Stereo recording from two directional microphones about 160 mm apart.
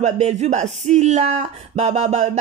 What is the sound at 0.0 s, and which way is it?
Speech, 45° right (ahead or behind).